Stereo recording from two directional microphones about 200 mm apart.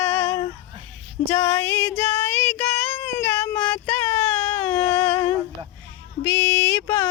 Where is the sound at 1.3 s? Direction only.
15° left (ahead or behind).